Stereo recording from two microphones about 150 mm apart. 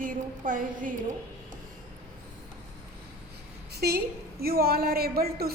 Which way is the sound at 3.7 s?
90° right.